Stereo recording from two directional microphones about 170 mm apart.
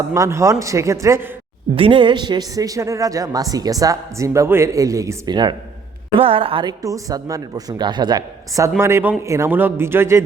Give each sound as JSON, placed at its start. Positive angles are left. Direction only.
{"t": 0.1, "sound": "a man's voice", "side_deg": -15}
{"t": 1.7, "sound": "a man's voice", "side_deg": -30}